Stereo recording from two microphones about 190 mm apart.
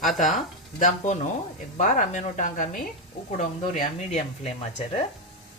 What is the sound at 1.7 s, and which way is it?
Speech, 40° left (ahead or behind).